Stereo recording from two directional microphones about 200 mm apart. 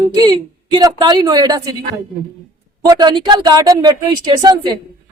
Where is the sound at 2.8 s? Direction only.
20° right (ahead or behind).